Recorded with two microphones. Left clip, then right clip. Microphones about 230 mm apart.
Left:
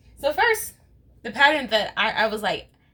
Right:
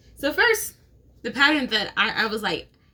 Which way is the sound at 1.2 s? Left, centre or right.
Centre.